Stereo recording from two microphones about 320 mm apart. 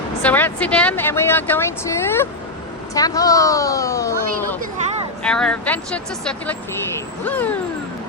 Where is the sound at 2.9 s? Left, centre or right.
Centre.